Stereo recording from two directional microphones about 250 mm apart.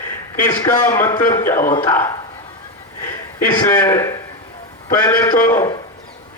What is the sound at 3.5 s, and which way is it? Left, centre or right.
A man's voice, centre.